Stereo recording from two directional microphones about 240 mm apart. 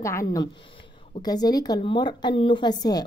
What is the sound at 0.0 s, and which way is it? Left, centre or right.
A woman's voice, centre.